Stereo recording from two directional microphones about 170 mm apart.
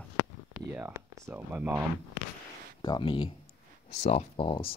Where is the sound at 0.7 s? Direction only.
10° right (ahead or behind).